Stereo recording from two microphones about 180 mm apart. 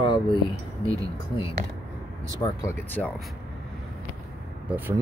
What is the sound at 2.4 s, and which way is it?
Speech, 15° left (ahead or behind).